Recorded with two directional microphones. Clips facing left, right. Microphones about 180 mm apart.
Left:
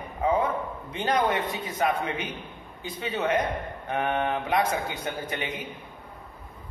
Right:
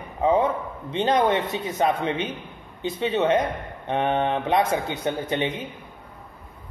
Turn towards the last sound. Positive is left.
turn(degrees=-25)  # may be behind; listen again after turning